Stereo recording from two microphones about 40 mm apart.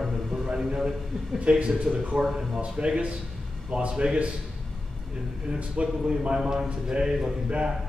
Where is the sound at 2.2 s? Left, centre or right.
Centre.